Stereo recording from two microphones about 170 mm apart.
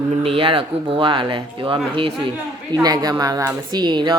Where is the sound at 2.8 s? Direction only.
25° right (ahead or behind).